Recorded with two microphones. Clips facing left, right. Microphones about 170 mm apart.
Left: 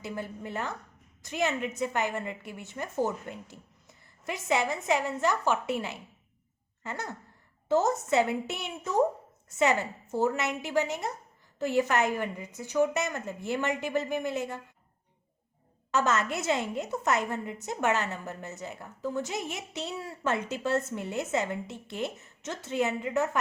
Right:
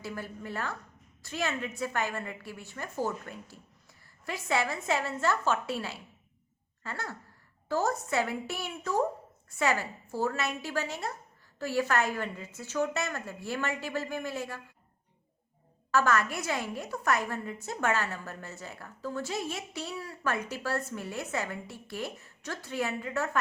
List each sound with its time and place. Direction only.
0.0 s a woman's voice: 20° left (ahead or behind)
15.9 s a woman's voice: 20° left (ahead or behind)